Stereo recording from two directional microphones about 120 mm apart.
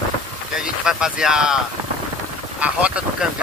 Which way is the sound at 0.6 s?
5° right (ahead or behind).